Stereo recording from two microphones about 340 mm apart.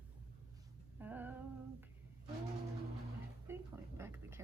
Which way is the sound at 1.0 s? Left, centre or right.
Centre.